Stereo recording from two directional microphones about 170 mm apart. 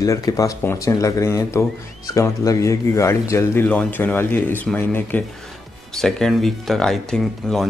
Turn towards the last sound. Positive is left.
turn(degrees=0)  # may be behind; listen again after turning